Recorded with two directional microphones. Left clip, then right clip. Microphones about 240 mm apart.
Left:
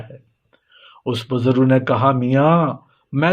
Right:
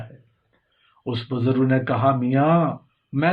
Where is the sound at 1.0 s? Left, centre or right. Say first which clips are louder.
Left 5 dB; left.